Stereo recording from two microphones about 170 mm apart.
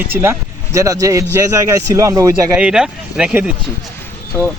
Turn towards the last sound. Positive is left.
turn(degrees=5)  # may be behind; listen again after turning